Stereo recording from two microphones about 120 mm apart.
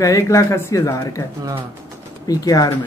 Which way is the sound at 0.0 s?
25° left (ahead or behind).